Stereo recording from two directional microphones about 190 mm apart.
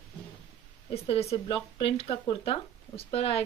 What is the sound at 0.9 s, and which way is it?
Speech, 30° left (ahead or behind).